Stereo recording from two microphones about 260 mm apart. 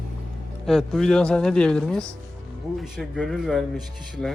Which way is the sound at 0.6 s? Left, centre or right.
Centre.